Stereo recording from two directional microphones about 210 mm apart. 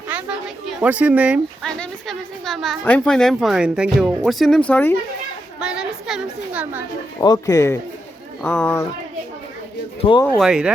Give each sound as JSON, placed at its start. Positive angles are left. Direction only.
{"t": 0.1, "sound": "a woman's voice", "side_deg": -5}
{"t": 5.5, "sound": "a woman's voice", "side_deg": -5}
{"t": 7.2, "sound": "speech", "side_deg": 15}
{"t": 10.0, "sound": "speech", "side_deg": 25}
{"t": 10.2, "sound": "a woman's voice", "side_deg": 0}